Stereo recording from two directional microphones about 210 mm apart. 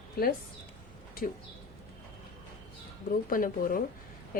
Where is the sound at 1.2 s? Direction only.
45° left (ahead or behind).